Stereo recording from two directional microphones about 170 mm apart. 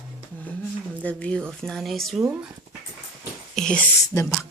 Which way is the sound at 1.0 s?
5° left (ahead or behind).